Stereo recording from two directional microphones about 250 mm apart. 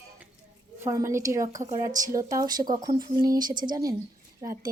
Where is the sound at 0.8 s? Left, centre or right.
Centre.